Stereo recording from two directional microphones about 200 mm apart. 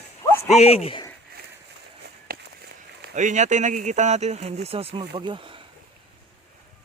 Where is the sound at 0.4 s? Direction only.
30° left (ahead or behind).